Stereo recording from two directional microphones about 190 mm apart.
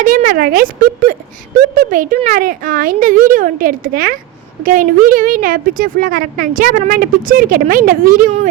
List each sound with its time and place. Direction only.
0.0 s a woman's voice: 45° right (ahead or behind)